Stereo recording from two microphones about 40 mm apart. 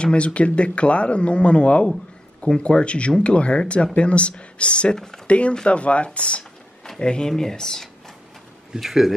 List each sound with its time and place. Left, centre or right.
0.0 s speech: left
4.9 s speech: centre
5.2 s speech: left; by 7.9 s centre
8.7 s speech: centre